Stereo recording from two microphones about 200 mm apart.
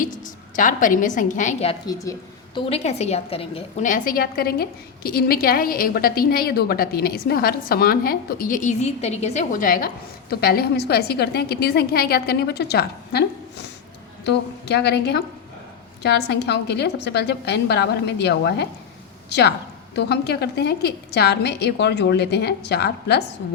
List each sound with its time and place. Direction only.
0.0 s a woman's voice: 40° left (ahead or behind)
14.3 s a woman's voice: 55° left (ahead or behind)